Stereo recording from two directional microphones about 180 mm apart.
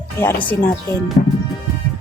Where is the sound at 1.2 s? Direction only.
45° left (ahead or behind).